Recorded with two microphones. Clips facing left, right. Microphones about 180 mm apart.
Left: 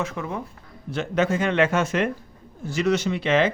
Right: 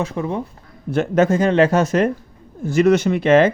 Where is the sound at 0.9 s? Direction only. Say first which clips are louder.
Right 7 dB; 50° right (ahead or behind).